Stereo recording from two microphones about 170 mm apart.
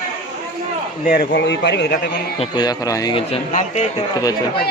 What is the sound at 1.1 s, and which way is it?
Speech, 80° left.